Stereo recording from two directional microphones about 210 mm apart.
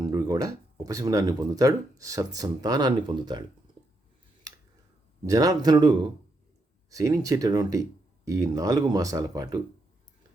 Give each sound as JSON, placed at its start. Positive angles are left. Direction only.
{"t": 0.0, "sound": "speech", "side_deg": -15}
{"t": 5.2, "sound": "speech", "side_deg": -15}